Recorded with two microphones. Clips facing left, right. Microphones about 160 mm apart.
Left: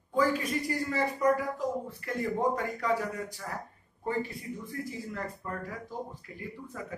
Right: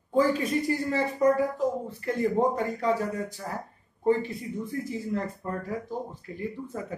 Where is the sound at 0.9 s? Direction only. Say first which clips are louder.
Right 3 dB; 25° right (ahead or behind).